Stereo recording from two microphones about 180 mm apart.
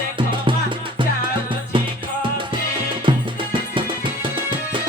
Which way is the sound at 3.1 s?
30° right (ahead or behind).